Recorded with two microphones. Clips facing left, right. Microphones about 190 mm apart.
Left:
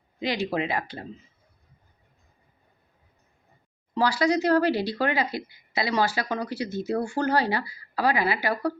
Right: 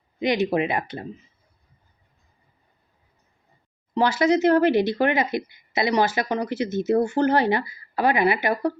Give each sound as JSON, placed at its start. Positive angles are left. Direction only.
{"t": 0.2, "sound": "speech", "side_deg": -20}
{"t": 3.9, "sound": "speech", "side_deg": -20}